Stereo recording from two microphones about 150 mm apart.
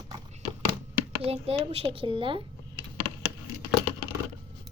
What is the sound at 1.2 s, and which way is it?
A woman's voice, 40° right (ahead or behind).